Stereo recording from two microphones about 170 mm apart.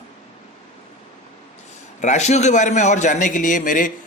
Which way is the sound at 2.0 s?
45° left (ahead or behind).